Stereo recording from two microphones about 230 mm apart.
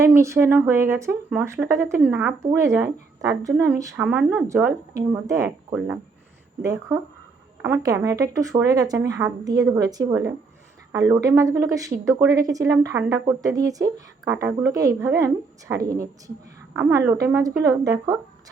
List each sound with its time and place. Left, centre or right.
0.0 s speech: centre
6.6 s speech: centre